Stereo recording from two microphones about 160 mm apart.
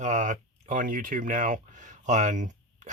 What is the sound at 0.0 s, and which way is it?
Speech, 50° right (ahead or behind).